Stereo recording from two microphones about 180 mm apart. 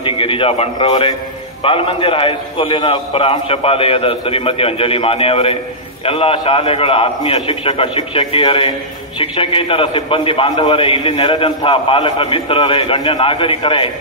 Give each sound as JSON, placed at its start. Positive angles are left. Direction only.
{"t": 0.0, "sound": "a man's voice", "side_deg": 30}